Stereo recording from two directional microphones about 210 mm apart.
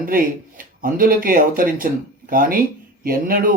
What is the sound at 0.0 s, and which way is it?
Speech, 45° right (ahead or behind).